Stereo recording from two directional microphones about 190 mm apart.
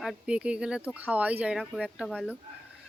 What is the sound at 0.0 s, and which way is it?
Speech, 5° right (ahead or behind).